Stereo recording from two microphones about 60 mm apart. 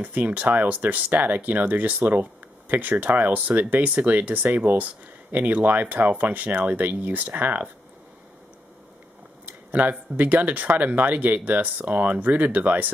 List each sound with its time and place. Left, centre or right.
0.0 s speech: right
9.5 s speech: right